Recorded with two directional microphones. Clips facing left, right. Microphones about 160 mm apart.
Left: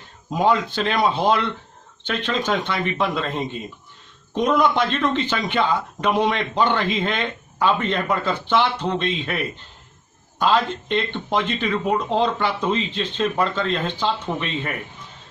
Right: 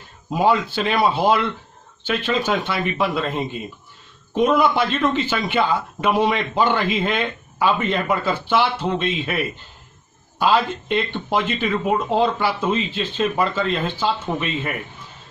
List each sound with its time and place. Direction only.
0.3 s speech: 5° right (ahead or behind)